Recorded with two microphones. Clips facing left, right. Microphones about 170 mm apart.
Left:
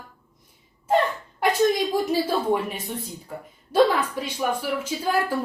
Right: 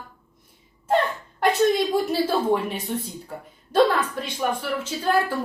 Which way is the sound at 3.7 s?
10° left (ahead or behind).